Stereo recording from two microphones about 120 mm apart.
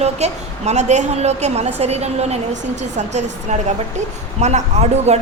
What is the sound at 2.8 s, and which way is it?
A woman's voice, 75° right (ahead or behind).